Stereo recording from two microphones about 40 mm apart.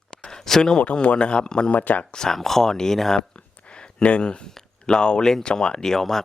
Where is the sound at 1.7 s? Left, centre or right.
Left.